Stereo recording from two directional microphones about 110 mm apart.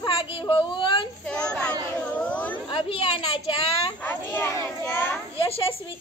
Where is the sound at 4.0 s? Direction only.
20° left (ahead or behind).